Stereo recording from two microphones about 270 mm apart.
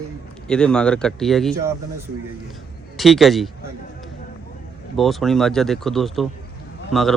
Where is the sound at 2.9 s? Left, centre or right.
Centre.